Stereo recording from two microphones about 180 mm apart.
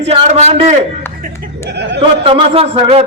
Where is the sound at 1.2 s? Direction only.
70° right (ahead or behind).